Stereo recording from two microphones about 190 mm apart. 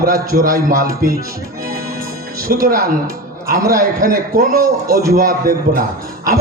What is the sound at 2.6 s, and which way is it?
A man's voice, 50° right (ahead or behind).